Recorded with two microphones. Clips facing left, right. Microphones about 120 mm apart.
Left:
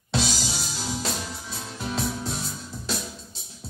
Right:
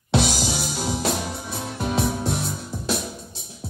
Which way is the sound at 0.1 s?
60° right (ahead or behind).